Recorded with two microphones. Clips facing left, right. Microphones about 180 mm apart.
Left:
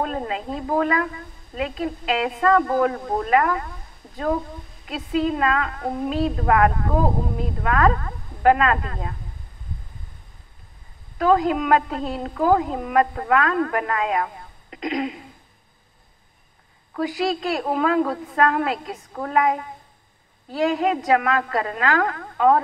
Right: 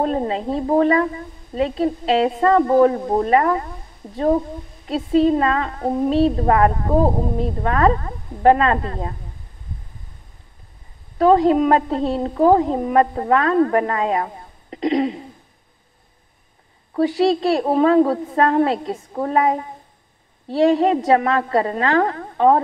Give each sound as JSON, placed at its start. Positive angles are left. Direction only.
{"t": 0.0, "sound": "a woman's voice", "side_deg": -35}
{"t": 11.1, "sound": "a woman's voice", "side_deg": -30}
{"t": 16.9, "sound": "a woman's voice", "side_deg": -35}